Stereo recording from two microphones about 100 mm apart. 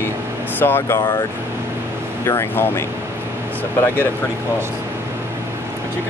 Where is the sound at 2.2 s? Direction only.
25° left (ahead or behind).